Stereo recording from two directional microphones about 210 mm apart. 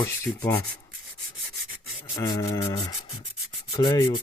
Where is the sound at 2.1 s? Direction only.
15° left (ahead or behind).